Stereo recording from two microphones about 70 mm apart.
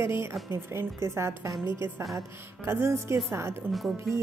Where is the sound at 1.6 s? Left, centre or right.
Left.